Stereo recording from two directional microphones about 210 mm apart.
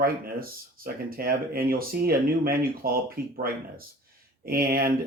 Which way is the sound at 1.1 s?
45° right (ahead or behind).